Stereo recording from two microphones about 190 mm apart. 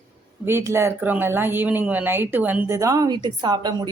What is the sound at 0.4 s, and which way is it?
Speech, 15° right (ahead or behind).